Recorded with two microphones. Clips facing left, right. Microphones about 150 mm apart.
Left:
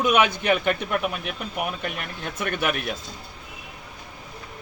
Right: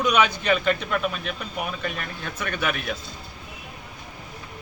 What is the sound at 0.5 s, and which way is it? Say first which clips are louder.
Speech: even; 15° left (ahead or behind).